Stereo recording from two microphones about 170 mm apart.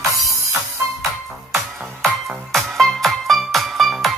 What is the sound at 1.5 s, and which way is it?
Music, centre (ahead or behind).